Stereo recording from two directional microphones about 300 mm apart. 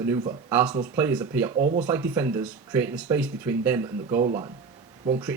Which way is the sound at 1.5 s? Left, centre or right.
Right.